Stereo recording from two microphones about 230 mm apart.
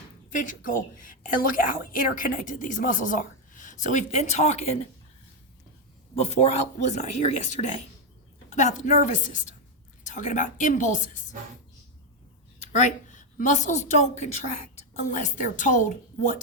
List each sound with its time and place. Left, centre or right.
0.3 s a woman's voice: left
6.1 s a woman's voice: left
12.5 s a woman's voice: left